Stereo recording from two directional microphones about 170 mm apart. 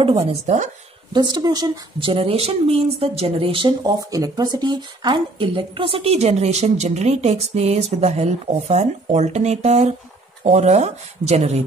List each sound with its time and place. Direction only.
0.3 s a woman's voice: 45° right (ahead or behind)
1.1 s speech: 25° right (ahead or behind)